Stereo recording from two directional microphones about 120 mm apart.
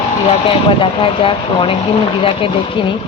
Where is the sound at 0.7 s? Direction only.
45° left (ahead or behind).